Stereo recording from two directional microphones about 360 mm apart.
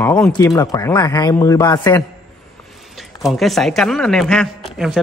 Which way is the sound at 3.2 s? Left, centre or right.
Centre.